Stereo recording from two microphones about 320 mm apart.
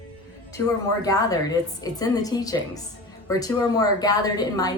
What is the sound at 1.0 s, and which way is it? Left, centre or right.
A woman's voice, centre.